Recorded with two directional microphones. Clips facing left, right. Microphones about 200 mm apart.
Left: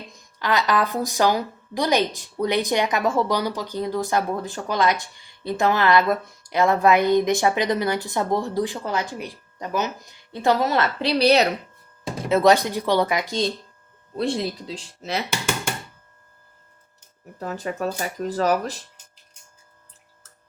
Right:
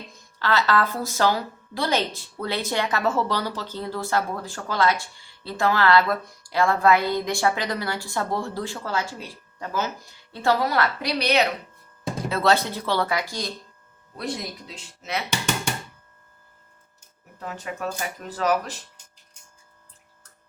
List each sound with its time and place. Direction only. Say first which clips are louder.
0.3 s a woman's voice: left 1 dB; 15° left (ahead or behind); by 11.4 s 35° left (ahead or behind)
12.3 s a woman's voice: left 5 dB; 15° left (ahead or behind); by 15.2 s 30° left (ahead or behind)
17.4 s speech: left 4 dB; 40° left (ahead or behind)